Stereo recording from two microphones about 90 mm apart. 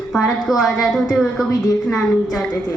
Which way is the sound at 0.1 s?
5° left (ahead or behind).